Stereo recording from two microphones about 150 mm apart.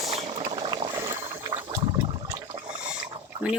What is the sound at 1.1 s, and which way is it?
Boat, 15° right (ahead or behind).